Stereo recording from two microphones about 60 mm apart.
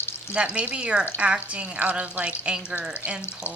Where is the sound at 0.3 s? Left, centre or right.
Right.